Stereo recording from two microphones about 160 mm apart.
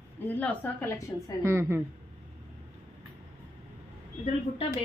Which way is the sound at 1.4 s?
15° right (ahead or behind).